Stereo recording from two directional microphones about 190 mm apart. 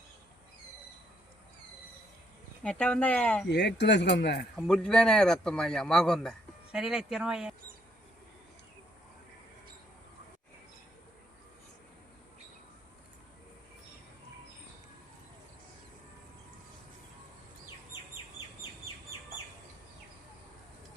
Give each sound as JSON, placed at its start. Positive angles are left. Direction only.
{"t": 2.6, "sound": "speech", "side_deg": 5}
{"t": 3.5, "sound": "speech", "side_deg": 60}
{"t": 4.5, "sound": "a man's voice", "side_deg": 0}